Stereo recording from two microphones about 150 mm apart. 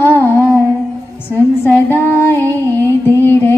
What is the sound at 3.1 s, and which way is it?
Music, 15° left (ahead or behind).